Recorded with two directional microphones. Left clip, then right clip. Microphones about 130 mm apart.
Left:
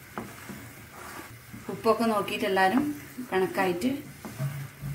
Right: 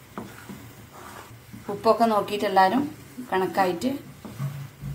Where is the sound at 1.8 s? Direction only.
10° right (ahead or behind).